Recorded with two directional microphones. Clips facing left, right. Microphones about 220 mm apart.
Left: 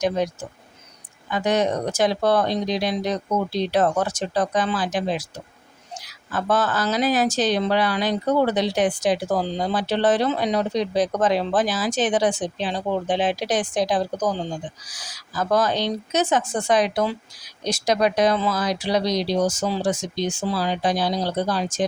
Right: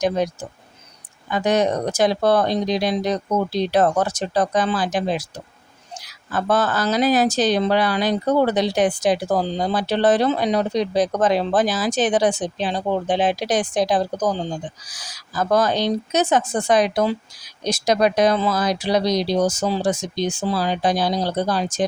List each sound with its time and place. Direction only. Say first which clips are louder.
1.3 s speech: right 2 dB; 40° right (ahead or behind)
6.3 s speech: right 2 dB; 40° right (ahead or behind)